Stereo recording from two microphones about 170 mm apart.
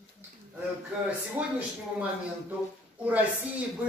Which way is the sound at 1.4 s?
10° right (ahead or behind).